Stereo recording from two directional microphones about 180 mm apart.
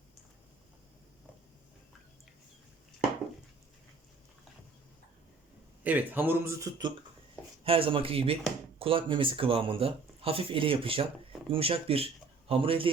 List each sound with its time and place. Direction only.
5.8 s speech: 10° right (ahead or behind)
7.6 s speech: 30° right (ahead or behind)